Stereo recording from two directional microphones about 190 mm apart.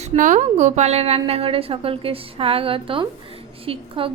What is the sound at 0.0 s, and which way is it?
A woman's voice, 40° right (ahead or behind).